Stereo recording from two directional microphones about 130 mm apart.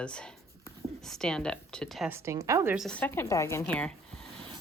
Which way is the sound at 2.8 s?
5° left (ahead or behind).